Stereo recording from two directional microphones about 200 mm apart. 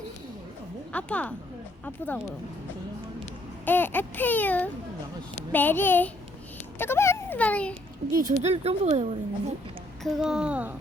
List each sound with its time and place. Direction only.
0.9 s speech: 5° left (ahead or behind)
3.7 s a child's voice: 10° left (ahead or behind)
8.1 s speech: 35° right (ahead or behind)
10.0 s speech: centre (ahead or behind)